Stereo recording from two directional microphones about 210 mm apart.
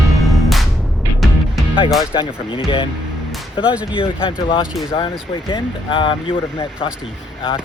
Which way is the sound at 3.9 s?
25° left (ahead or behind).